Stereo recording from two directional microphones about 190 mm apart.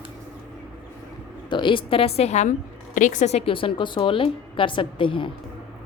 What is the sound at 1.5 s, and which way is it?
A woman's voice, 25° left (ahead or behind).